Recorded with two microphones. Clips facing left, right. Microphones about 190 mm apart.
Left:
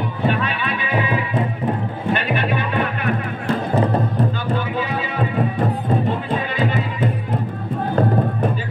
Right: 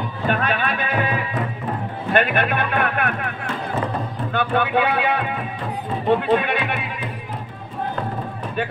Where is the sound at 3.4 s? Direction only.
35° left (ahead or behind).